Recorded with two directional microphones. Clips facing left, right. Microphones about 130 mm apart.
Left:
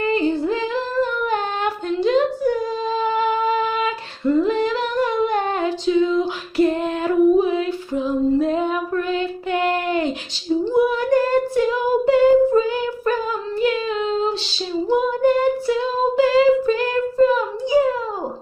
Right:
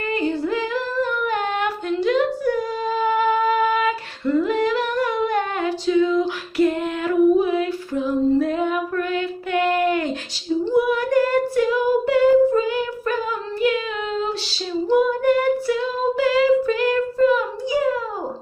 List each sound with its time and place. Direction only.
0.1 s female singing: 30° left (ahead or behind)
1.2 s humming: 30° left (ahead or behind)
3.0 s singing: 25° left (ahead or behind)
4.4 s humming: 25° left (ahead or behind)
6.5 s female singing: 30° left (ahead or behind)
10.7 s child singing: 25° left (ahead or behind)
13.6 s singing: 30° left (ahead or behind)